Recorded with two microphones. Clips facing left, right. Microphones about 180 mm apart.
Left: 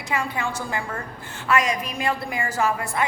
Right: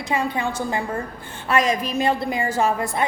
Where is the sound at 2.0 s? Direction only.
25° right (ahead or behind).